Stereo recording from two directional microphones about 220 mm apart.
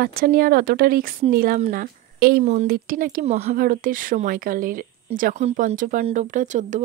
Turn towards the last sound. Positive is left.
turn(degrees=-35)  # may be behind; listen again after turning